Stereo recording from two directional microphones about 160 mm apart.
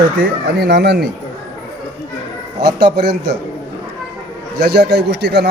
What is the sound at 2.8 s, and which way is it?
Speech, 90° right.